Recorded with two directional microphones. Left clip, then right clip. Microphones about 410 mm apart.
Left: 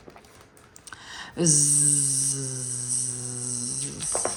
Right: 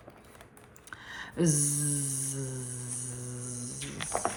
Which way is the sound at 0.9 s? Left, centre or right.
Centre.